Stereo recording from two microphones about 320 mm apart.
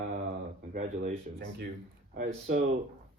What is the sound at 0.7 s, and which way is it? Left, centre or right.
Speech, right.